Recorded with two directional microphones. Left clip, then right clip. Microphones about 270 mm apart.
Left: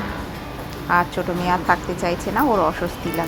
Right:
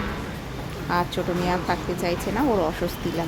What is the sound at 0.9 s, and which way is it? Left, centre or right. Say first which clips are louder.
Speech: left 5 dB; centre.